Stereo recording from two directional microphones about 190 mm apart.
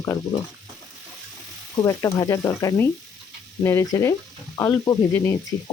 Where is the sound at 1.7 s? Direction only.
15° left (ahead or behind).